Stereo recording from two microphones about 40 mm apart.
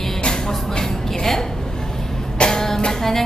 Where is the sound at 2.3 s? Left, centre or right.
Centre.